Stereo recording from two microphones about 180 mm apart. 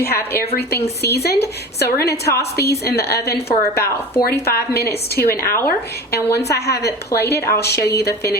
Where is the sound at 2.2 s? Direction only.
15° left (ahead or behind).